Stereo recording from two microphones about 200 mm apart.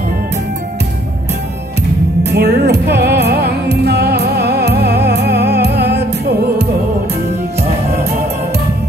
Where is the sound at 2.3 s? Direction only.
55° right (ahead or behind).